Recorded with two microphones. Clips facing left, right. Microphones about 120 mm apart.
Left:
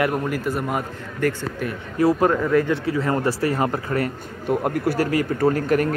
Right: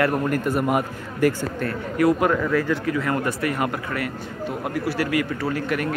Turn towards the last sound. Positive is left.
turn(degrees=40)  # may be behind; listen again after turning